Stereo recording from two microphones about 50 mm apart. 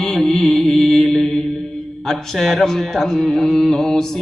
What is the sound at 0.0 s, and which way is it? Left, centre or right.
Music, centre.